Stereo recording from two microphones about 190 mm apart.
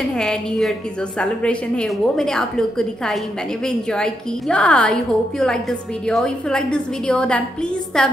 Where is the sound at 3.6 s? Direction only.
5° left (ahead or behind).